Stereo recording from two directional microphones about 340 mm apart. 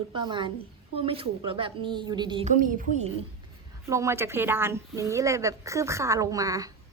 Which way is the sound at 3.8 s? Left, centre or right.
Centre.